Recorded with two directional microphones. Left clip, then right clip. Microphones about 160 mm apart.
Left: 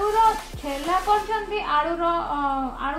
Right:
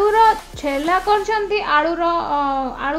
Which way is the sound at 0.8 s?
70° right (ahead or behind).